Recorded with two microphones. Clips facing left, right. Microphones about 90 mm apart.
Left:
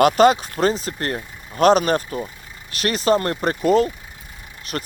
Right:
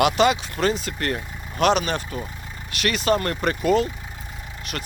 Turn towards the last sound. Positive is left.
turn(degrees=30)  # may be behind; listen again after turning